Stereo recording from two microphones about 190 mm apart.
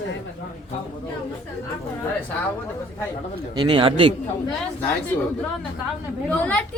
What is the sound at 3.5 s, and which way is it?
Speech, 25° right (ahead or behind).